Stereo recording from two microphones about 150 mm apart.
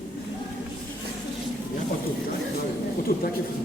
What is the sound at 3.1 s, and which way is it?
Speech, 70° left (ahead or behind).